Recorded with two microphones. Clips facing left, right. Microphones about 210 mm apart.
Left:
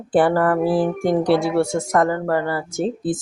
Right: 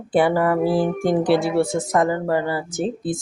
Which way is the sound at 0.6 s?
Centre (ahead or behind).